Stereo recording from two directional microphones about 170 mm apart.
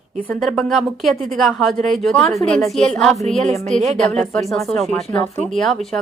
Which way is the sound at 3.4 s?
45° right (ahead or behind).